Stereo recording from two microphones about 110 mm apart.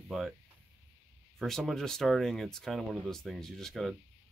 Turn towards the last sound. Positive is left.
turn(degrees=0)  # may be behind; listen again after turning